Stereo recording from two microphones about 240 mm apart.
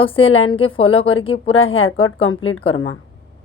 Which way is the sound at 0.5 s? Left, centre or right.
Left.